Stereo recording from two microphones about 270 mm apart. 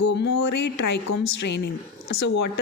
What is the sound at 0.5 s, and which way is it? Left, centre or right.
Speech, left.